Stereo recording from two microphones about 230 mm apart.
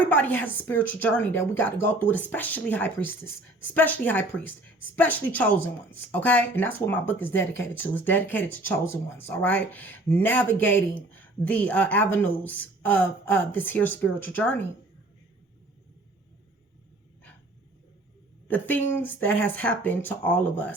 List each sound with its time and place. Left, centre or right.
0.0 s speech: centre
18.4 s speech: centre